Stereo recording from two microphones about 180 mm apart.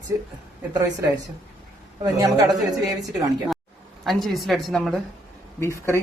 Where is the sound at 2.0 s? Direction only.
20° right (ahead or behind).